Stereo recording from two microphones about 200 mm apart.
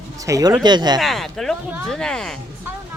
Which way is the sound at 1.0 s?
Centre (ahead or behind).